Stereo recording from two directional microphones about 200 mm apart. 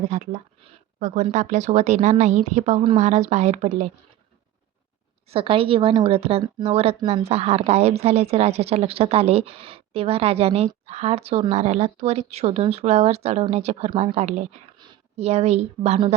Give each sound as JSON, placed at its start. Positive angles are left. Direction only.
{"t": 0.1, "sound": "speech", "side_deg": -35}
{"t": 5.3, "sound": "a woman's voice", "side_deg": -25}